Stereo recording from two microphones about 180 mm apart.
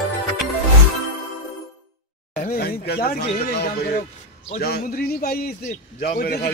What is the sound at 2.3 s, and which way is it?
A man's voice, 55° left (ahead or behind).